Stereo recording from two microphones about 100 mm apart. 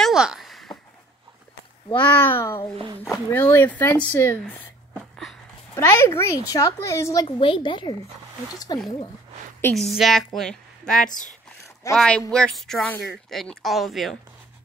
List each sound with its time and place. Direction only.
0.0 s a sound: 5° right (ahead or behind)
1.9 s speech: 15° left (ahead or behind)
5.8 s speech: 25° left (ahead or behind)
7.2 s a woman's voice: 60° left (ahead or behind)
9.8 s a woman's voice: centre (ahead or behind)